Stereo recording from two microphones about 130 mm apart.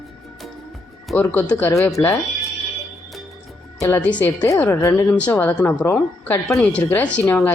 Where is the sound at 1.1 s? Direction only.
10° left (ahead or behind).